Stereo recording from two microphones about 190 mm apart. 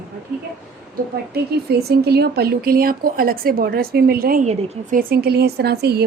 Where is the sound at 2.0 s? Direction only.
55° right (ahead or behind).